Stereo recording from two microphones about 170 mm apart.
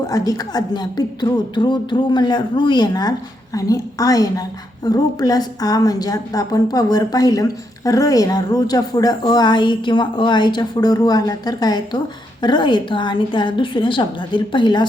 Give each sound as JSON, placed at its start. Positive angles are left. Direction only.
{"t": 0.0, "sound": "speech", "side_deg": 20}